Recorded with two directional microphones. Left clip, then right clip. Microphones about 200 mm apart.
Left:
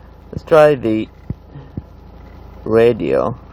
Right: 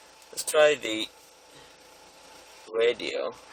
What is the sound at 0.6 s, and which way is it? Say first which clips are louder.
Speech: left 8 dB; 5° right (ahead or behind).